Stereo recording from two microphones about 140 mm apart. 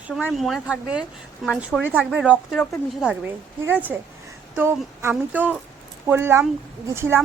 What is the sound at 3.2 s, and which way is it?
Speech, 15° right (ahead or behind).